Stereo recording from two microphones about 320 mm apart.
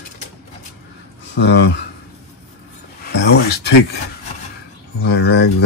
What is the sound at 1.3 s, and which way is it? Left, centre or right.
Speech, left.